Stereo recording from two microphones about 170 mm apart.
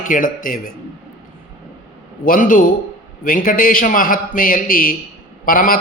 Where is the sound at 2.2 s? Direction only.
55° left (ahead or behind).